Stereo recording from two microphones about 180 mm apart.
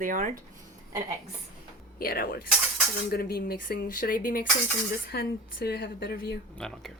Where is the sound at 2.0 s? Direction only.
55° left (ahead or behind).